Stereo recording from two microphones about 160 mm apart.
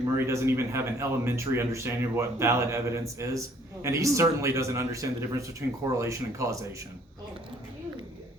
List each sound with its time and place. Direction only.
0.2 s a man's voice: 15° right (ahead or behind)